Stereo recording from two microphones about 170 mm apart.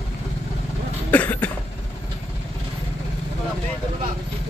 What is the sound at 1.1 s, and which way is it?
Cough, 10° left (ahead or behind).